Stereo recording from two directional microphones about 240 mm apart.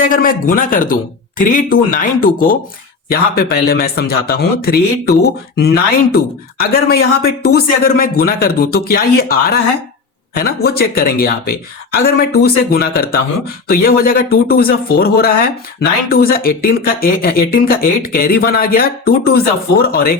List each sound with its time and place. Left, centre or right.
0.0 s speech: left